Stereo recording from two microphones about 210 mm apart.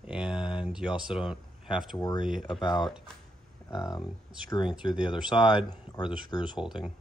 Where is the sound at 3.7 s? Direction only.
20° left (ahead or behind).